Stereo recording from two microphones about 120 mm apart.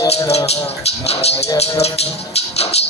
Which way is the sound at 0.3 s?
60° left (ahead or behind).